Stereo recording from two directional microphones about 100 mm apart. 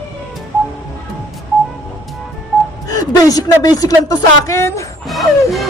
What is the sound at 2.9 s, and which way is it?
Speech, 35° left (ahead or behind).